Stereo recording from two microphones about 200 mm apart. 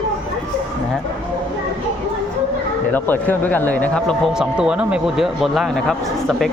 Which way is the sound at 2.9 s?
10° left (ahead or behind).